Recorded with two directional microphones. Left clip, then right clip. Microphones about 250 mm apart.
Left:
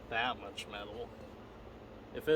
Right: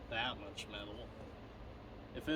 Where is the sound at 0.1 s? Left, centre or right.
Centre.